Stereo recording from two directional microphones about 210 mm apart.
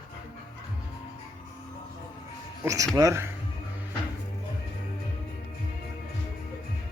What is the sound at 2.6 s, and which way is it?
Speech, 15° right (ahead or behind).